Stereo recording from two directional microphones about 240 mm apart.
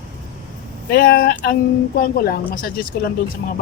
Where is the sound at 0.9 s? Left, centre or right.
Left.